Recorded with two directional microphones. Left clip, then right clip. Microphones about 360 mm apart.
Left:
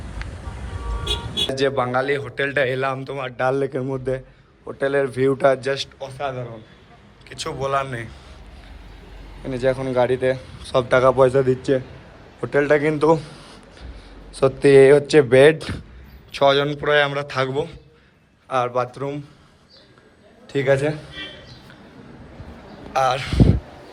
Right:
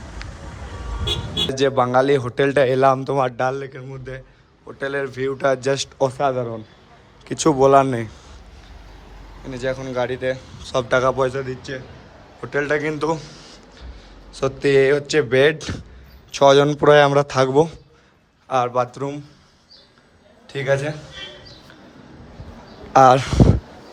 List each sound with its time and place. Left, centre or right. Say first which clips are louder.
0.2 s vehicle: left 1 dB; centre
1.0 s vehicle: right 1 dB; right
1.5 s a man's voice: right 5 dB; centre
9.4 s a man's voice: left 4 dB; centre
20.5 s a man's voice: left 2 dB; centre
22.9 s speech: right 8 dB; right